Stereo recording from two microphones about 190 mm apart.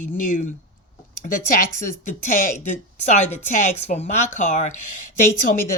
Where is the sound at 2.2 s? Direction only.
40° left (ahead or behind).